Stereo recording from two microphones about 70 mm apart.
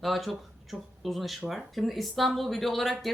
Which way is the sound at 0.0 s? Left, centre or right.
Centre.